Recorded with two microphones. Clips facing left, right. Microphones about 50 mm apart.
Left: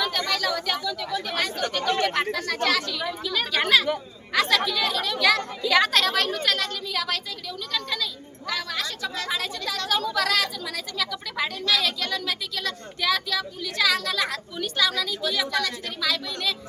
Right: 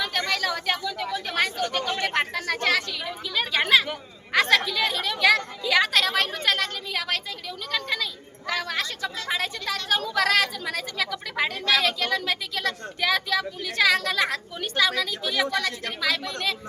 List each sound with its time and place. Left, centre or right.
0.0 s speech: right
3.3 s a woman's voice: right
4.3 s speech: right
5.6 s a woman's voice: centre
6.1 s a woman's voice: right
7.7 s a sound: right
9.3 s speech: right